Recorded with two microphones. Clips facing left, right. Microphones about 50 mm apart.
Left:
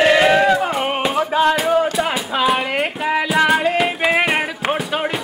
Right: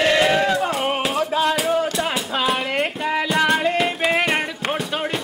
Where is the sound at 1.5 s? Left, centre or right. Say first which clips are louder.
Left 4 dB; centre.